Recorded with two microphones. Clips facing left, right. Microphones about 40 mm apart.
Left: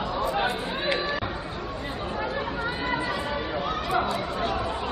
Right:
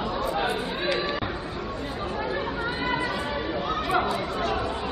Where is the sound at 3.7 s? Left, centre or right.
Centre.